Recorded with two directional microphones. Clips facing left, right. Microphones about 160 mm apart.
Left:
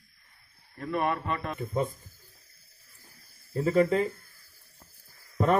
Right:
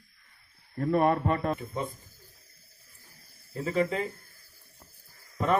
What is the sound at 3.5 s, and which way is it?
Speech, 40° left (ahead or behind).